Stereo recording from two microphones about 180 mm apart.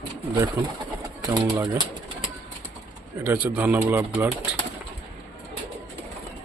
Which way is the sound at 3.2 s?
10° right (ahead or behind).